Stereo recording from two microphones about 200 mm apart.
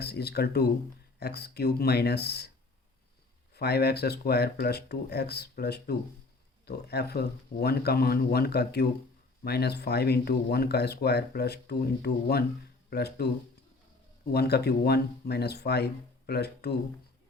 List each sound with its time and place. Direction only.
0.0 s speech: 55° left (ahead or behind)
3.5 s speech: 55° left (ahead or behind)
14.3 s speech: 55° left (ahead or behind)